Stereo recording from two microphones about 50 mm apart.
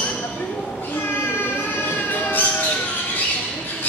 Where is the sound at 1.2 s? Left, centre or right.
Left.